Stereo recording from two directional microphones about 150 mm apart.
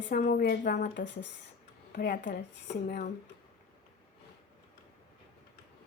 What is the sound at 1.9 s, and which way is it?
Speech, 90° left.